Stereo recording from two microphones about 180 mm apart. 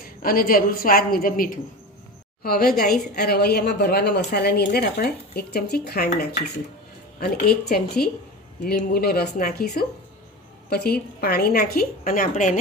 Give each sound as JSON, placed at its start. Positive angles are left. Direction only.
{"t": 0.2, "sound": "a woman's voice", "side_deg": 55}